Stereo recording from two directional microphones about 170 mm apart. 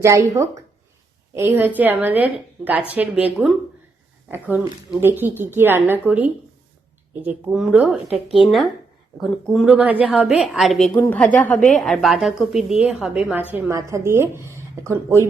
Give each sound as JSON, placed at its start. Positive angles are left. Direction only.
{"t": 0.0, "sound": "a woman's voice", "side_deg": -15}